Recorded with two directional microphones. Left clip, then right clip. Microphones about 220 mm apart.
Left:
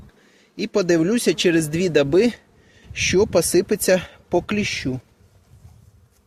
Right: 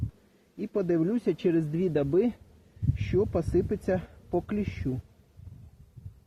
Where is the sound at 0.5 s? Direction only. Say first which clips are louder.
Left 9 dB; 50° left (ahead or behind).